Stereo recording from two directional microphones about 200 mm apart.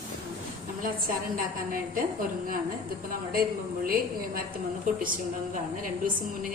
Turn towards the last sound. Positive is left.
turn(degrees=-45)  # may be behind; listen again after turning